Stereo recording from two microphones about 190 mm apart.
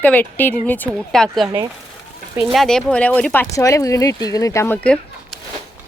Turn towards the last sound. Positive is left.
turn(degrees=5)  # may be behind; listen again after turning